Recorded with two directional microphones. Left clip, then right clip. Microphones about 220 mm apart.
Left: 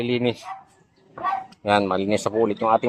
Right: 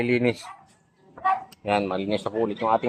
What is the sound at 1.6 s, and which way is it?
Speech, 35° left (ahead or behind).